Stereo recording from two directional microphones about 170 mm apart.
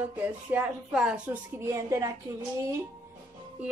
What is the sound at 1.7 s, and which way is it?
Speech, 20° right (ahead or behind).